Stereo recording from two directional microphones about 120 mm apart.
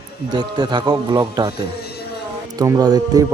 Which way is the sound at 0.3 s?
40° right (ahead or behind).